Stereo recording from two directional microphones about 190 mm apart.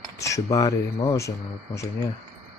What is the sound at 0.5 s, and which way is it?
Speech, 20° left (ahead or behind).